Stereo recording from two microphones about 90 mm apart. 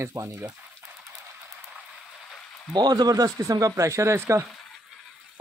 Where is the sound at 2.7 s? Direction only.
50° right (ahead or behind); by 4.4 s 30° right (ahead or behind).